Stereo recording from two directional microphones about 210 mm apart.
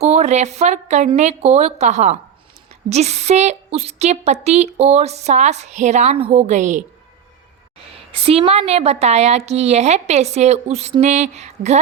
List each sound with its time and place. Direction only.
0.0 s a woman's voice: 30° right (ahead or behind)
8.1 s a woman's voice: 30° right (ahead or behind)